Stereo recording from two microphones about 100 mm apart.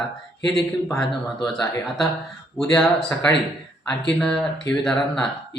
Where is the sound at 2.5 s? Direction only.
5° left (ahead or behind).